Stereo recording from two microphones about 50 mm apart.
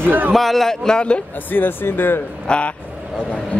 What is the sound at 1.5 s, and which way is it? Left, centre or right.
Speech, left.